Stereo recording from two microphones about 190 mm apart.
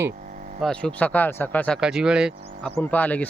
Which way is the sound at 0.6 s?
5° left (ahead or behind).